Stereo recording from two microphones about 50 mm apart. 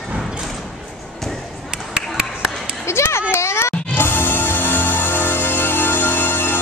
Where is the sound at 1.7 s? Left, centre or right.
Centre.